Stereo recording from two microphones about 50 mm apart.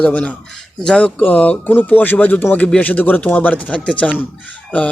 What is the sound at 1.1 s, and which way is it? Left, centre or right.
A man's voice, left.